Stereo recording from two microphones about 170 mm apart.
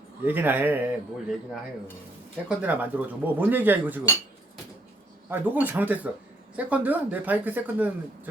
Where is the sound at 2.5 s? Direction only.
10° right (ahead or behind).